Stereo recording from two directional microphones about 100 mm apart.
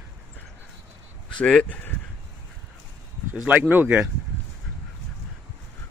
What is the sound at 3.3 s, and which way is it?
Speech, 15° right (ahead or behind).